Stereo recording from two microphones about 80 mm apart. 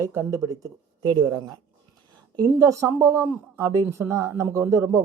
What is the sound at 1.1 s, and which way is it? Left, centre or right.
Speech, right.